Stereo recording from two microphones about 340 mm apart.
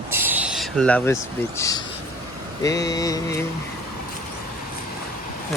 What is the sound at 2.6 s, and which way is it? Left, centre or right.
Speech, centre.